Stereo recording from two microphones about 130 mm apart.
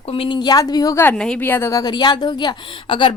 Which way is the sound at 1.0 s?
5° left (ahead or behind).